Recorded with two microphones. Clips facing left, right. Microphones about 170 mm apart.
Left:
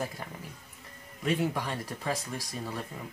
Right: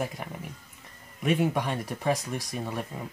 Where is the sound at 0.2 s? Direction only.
15° right (ahead or behind).